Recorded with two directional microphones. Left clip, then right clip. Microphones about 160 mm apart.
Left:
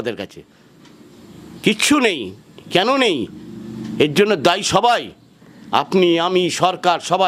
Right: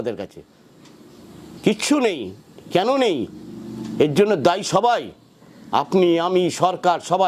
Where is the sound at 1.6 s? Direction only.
10° left (ahead or behind).